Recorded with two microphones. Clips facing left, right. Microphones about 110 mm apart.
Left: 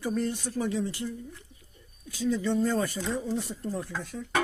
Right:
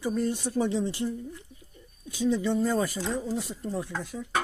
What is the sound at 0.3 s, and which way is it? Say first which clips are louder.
Speech: right 3 dB; 20° right (ahead or behind).